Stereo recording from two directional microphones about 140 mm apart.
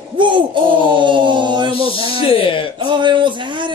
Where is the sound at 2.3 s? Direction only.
40° left (ahead or behind).